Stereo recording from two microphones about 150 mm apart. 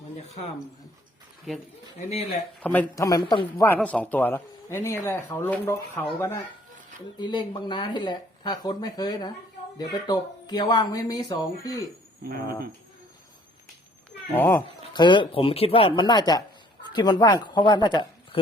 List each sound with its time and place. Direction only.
1.5 s speech: centre (ahead or behind)
2.9 s speech: 20° left (ahead or behind)
3.8 s speech: 10° left (ahead or behind)
12.2 s speech: 90° right
14.3 s speech: 15° left (ahead or behind)
14.9 s speech: 30° left (ahead or behind)